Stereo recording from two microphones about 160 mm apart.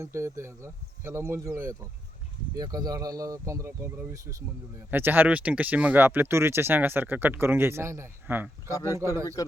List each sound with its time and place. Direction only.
0.0 s speech: 15° right (ahead or behind)
8.7 s speech: 20° left (ahead or behind)